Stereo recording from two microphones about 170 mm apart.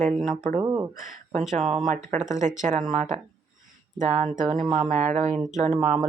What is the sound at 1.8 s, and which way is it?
Speech, 50° right (ahead or behind).